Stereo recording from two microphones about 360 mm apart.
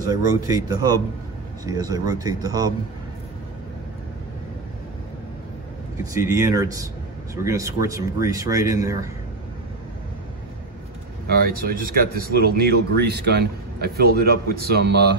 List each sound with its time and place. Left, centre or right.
0.0 s a man's voice: centre
6.1 s a man's voice: centre
11.2 s speech: right